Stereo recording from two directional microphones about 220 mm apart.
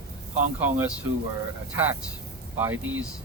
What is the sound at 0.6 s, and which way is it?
Speech, 10° right (ahead or behind).